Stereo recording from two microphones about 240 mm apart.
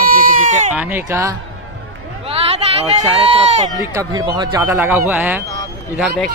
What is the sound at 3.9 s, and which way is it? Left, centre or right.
A man's voice, centre.